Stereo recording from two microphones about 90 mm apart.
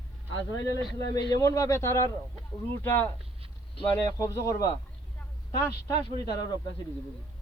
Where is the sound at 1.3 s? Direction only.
35° left (ahead or behind).